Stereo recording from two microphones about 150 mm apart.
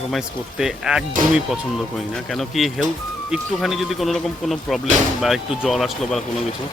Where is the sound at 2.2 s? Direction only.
Centre (ahead or behind).